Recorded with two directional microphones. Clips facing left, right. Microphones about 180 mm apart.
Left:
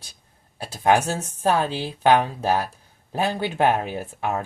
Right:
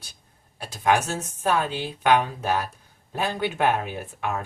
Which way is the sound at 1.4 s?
30° left (ahead or behind).